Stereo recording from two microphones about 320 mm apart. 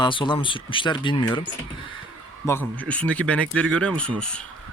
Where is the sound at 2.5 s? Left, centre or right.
Centre.